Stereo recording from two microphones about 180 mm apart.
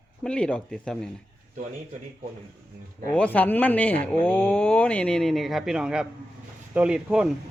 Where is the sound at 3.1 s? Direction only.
5° left (ahead or behind).